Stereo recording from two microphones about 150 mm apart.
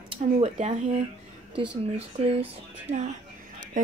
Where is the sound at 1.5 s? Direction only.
40° right (ahead or behind).